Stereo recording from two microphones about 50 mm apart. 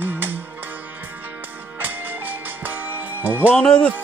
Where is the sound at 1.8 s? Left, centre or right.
Right.